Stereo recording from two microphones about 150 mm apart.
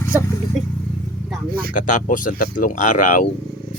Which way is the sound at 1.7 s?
60° left (ahead or behind).